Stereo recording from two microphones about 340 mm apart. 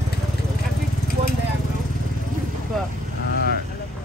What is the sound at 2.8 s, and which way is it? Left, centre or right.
Speech, centre.